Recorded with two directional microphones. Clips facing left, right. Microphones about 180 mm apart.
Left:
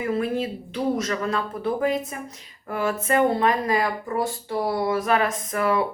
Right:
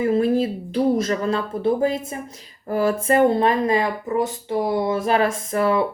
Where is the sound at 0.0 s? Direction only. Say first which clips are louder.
Right 6 dB; 30° right (ahead or behind).